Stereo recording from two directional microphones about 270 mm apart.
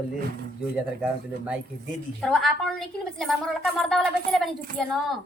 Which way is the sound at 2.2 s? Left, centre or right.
Centre.